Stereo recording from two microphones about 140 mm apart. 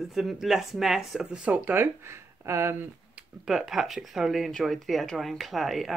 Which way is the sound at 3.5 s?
Centre (ahead or behind).